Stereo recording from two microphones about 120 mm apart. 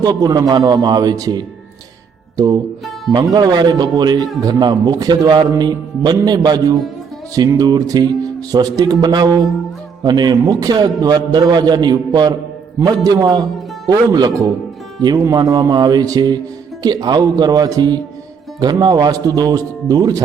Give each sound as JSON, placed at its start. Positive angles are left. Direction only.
{"t": 0.0, "sound": "a man's voice", "side_deg": -35}